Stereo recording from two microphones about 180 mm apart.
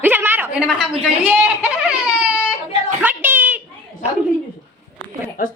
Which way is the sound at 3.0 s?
10° right (ahead or behind).